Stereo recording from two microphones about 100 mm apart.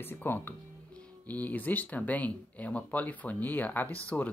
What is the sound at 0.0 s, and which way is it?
Speech, 20° left (ahead or behind).